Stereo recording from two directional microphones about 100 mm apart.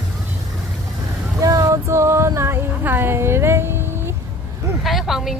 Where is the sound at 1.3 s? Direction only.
35° right (ahead or behind).